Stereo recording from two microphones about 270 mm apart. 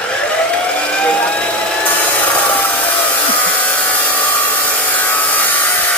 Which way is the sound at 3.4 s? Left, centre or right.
Centre.